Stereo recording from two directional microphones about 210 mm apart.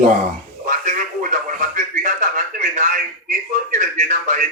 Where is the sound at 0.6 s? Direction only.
40° right (ahead or behind).